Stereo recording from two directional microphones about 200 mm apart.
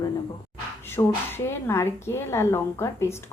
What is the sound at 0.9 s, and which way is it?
A woman's voice, 10° left (ahead or behind).